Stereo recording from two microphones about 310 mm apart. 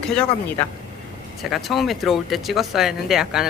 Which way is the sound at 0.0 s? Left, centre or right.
Centre.